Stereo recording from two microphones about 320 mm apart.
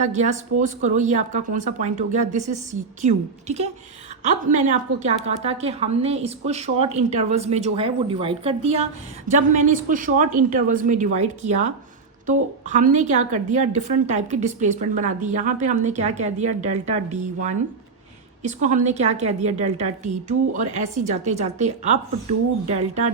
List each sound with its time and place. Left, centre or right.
0.0 s a woman's voice: right